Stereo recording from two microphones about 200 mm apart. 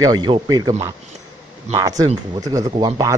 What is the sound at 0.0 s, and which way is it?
Speech, 20° right (ahead or behind).